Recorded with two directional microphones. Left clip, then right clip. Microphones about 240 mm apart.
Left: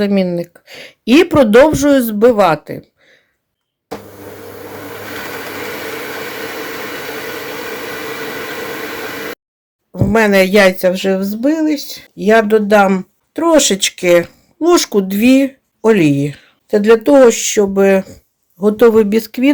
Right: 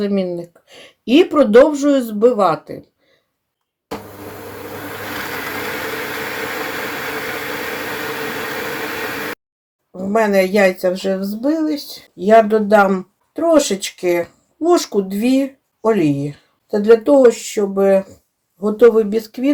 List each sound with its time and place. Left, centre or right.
0.0 s speech: left
9.9 s speech: left
11.8 s speech: left
12.1 s speech: left